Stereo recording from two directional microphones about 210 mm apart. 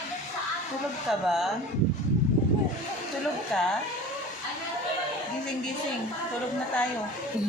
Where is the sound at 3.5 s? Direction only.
Centre (ahead or behind).